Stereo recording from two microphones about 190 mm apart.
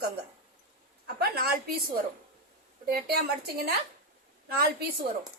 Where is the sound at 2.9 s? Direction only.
55° right (ahead or behind).